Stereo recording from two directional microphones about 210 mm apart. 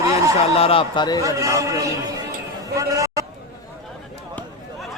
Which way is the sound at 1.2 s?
15° right (ahead or behind).